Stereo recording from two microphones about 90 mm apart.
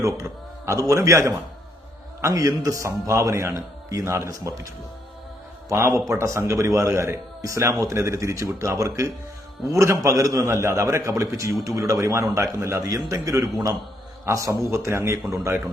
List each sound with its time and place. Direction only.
0.0 s a man's voice: 35° right (ahead or behind)